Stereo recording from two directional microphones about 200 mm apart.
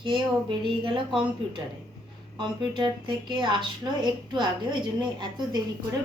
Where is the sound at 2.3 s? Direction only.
25° right (ahead or behind).